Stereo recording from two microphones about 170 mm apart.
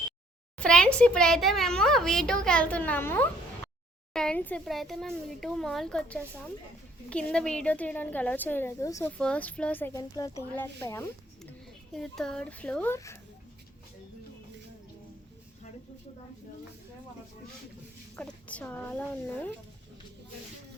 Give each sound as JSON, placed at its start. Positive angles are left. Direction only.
{"t": 0.6, "sound": "a woman's voice", "side_deg": 5}
{"t": 9.1, "sound": "a woman's voice", "side_deg": 5}
{"t": 11.9, "sound": "a woman's voice", "side_deg": 5}
{"t": 18.2, "sound": "speech", "side_deg": 10}